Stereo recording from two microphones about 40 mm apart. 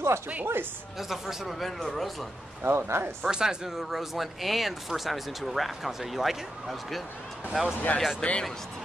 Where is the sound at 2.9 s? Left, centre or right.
Right.